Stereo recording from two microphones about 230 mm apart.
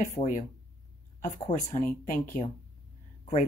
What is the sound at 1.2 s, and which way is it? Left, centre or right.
Speech, left.